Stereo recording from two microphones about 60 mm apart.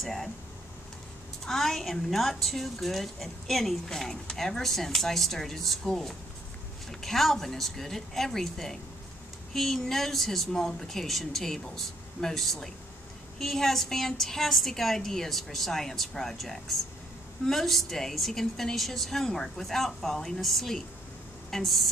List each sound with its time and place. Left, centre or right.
0.0 s a woman's voice: centre
1.4 s a woman's voice: centre